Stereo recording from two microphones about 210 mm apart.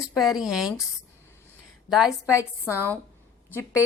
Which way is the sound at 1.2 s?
10° left (ahead or behind).